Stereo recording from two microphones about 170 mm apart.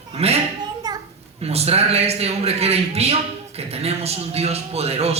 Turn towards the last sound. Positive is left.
turn(degrees=-35)  # may be behind; listen again after turning